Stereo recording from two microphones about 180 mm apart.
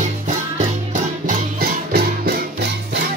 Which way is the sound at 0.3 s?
45° right (ahead or behind).